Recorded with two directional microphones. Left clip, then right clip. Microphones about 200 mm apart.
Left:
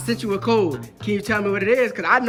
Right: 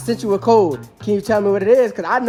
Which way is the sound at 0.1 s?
20° right (ahead or behind).